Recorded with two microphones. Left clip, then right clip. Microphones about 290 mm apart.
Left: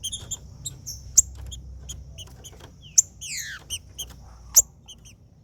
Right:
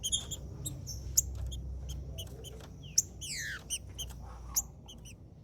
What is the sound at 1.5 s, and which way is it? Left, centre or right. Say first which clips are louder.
Vehicle: left 11 dB; centre.